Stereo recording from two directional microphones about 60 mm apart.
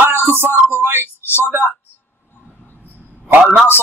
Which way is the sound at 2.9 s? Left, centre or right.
Right.